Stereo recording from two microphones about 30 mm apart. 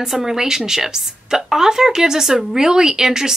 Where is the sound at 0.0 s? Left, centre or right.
Centre.